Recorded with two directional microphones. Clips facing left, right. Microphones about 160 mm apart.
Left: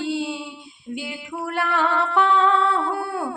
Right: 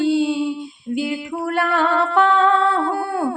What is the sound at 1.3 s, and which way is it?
Music, 45° right (ahead or behind).